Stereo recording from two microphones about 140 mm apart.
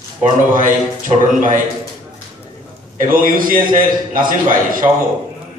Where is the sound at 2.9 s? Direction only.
75° right (ahead or behind).